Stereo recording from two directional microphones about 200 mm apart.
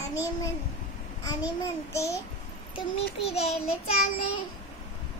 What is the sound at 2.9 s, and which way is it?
Child singing, 30° left (ahead or behind).